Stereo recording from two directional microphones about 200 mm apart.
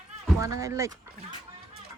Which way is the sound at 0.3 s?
15° right (ahead or behind).